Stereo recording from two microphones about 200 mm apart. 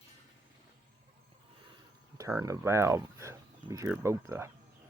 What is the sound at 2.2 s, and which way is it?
Speech, 15° right (ahead or behind).